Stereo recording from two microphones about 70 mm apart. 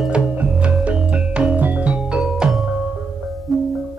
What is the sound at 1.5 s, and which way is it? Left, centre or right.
Music, right.